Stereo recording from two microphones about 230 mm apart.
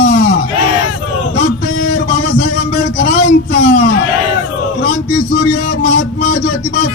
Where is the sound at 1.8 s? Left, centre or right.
Left.